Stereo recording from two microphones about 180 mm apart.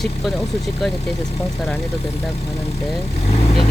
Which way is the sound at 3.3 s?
35° left (ahead or behind).